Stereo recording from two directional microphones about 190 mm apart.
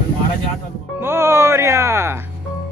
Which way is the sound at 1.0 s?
10° right (ahead or behind).